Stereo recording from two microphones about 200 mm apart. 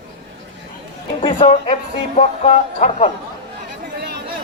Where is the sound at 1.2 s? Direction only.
30° left (ahead or behind).